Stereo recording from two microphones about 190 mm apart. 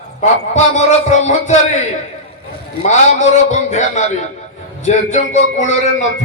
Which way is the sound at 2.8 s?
40° left (ahead or behind).